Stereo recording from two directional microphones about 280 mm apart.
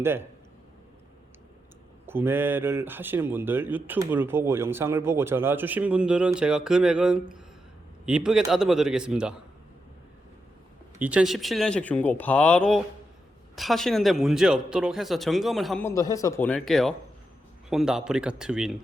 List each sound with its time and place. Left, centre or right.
0.0 s speech: centre
2.0 s speech: centre
11.0 s speech: centre